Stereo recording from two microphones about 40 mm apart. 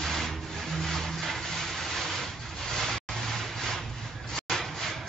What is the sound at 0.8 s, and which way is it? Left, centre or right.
Vehicle, centre.